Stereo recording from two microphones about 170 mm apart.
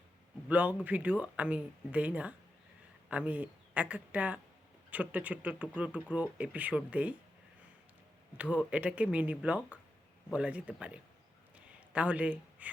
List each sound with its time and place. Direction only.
0.4 s speech: 10° right (ahead or behind)
8.4 s speech: 10° right (ahead or behind)
11.5 s a sound: 10° right (ahead or behind)